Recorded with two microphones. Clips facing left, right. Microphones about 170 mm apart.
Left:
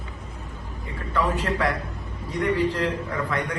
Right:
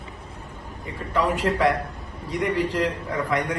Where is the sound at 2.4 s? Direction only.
15° right (ahead or behind).